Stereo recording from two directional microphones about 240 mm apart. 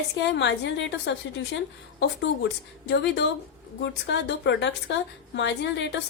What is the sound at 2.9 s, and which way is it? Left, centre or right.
A woman's voice, left.